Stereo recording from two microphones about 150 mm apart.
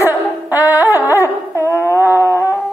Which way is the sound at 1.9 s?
15° right (ahead or behind).